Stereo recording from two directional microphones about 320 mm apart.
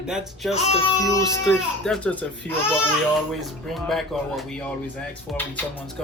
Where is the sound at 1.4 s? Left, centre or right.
Centre.